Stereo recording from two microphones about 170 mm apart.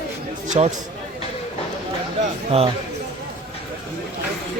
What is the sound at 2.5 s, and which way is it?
Speech, 40° right (ahead or behind).